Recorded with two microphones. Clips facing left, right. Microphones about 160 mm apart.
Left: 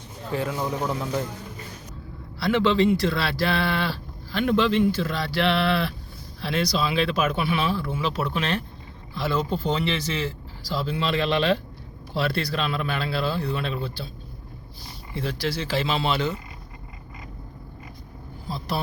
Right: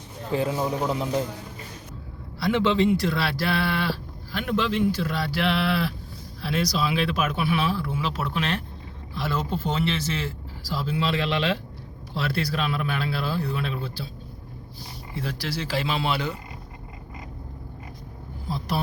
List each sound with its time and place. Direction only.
0.3 s speech: 20° right (ahead or behind)
2.4 s a man's voice: 15° right (ahead or behind)
15.1 s speech: 5° right (ahead or behind)
18.4 s speech: 10° right (ahead or behind)